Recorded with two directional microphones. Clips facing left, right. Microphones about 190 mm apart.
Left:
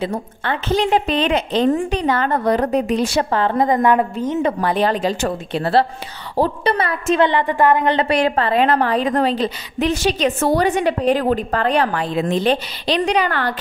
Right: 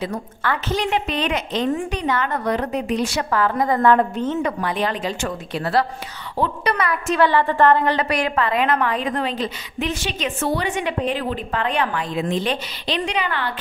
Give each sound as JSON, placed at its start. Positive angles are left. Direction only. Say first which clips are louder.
{"t": 0.0, "sound": "a woman's voice", "louder": "left 2 dB", "side_deg": 25}
{"t": 4.4, "sound": "a woman's voice", "louder": "left 4 dB", "side_deg": 30}